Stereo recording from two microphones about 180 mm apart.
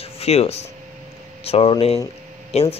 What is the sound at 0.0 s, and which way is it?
Speech, 35° left (ahead or behind).